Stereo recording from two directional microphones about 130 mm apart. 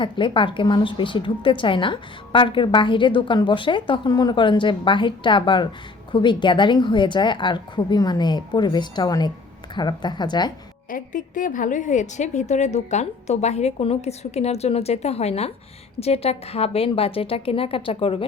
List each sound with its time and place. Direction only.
0.0 s speech: 40° left (ahead or behind)
10.8 s a woman's voice: 90° left; by 18.3 s 45° left (ahead or behind)